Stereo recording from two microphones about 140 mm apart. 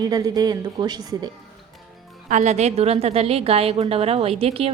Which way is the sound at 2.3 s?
60° right (ahead or behind).